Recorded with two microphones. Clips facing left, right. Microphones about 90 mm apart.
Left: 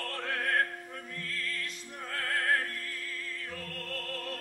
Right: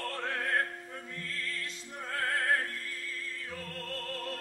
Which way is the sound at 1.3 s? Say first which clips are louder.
Left 2 dB; 30° right (ahead or behind).